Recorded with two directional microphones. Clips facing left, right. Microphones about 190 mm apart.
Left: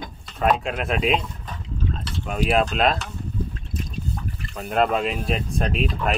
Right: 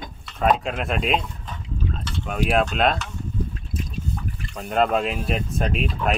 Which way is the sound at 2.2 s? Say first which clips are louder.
Even; centre (ahead or behind).